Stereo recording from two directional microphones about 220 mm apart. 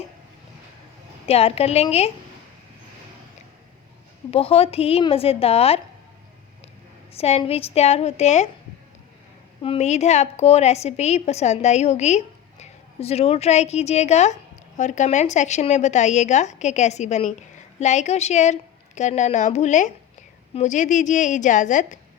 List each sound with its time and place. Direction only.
1.3 s a woman's voice: 25° left (ahead or behind)
4.3 s a woman's voice: 25° left (ahead or behind)
7.1 s a woman's voice: 25° left (ahead or behind)
9.6 s a woman's voice: 30° left (ahead or behind)